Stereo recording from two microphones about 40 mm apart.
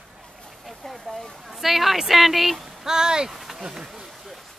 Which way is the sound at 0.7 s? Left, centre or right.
Centre.